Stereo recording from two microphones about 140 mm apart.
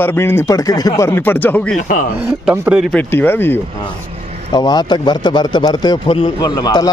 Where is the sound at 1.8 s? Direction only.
60° left (ahead or behind).